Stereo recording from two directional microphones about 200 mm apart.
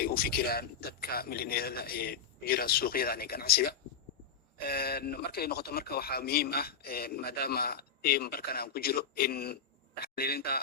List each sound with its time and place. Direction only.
0.0 s speech: 50° left (ahead or behind)